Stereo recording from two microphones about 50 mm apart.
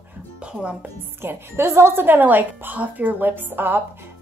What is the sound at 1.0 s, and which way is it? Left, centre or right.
A woman's voice, right.